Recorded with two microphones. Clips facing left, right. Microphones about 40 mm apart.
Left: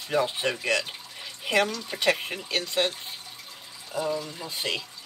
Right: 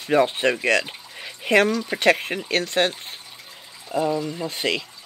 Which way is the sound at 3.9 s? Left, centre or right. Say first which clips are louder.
Right 6 dB; right.